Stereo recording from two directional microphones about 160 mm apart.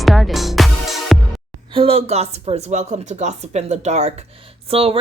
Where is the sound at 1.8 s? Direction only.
35° right (ahead or behind).